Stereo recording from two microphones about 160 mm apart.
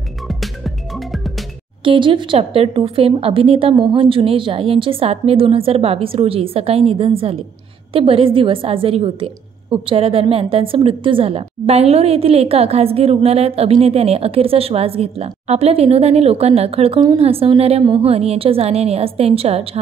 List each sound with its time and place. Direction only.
0.3 s music: centre (ahead or behind)
1.9 s a woman's voice: 30° right (ahead or behind)